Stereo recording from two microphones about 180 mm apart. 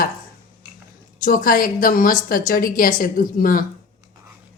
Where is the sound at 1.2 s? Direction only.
50° left (ahead or behind).